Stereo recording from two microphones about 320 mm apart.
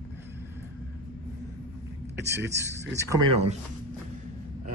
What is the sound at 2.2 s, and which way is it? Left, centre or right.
Speech, centre.